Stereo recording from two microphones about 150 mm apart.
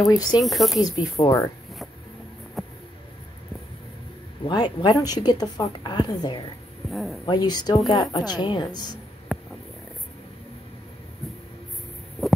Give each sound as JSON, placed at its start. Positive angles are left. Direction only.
{"t": 0.1, "sound": "a woman's voice", "side_deg": 25}
{"t": 0.4, "sound": "speech", "side_deg": 0}
{"t": 0.7, "sound": "a woman's voice", "side_deg": 25}
{"t": 2.6, "sound": "a sound", "side_deg": 0}
{"t": 4.5, "sound": "a woman's voice", "side_deg": 30}
{"t": 6.9, "sound": "speech", "side_deg": 0}
{"t": 7.2, "sound": "a woman's voice", "side_deg": 30}
{"t": 9.3, "sound": "a sound", "side_deg": 0}